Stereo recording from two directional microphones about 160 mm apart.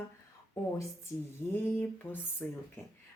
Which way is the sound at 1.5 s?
10° left (ahead or behind).